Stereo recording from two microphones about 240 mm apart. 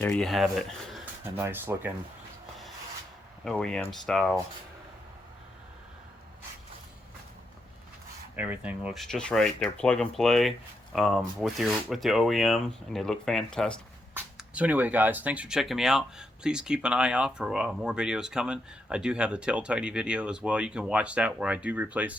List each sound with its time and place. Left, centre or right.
0.0 s speech: centre
3.4 s speech: centre
8.4 s speech: centre